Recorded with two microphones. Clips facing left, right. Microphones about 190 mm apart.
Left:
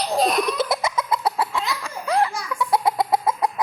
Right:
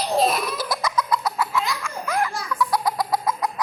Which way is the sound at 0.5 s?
25° left (ahead or behind).